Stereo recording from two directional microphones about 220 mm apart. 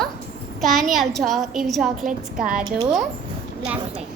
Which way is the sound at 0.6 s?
Centre (ahead or behind).